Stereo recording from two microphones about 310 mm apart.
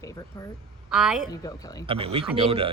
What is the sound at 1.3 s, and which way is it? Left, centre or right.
Speech, centre.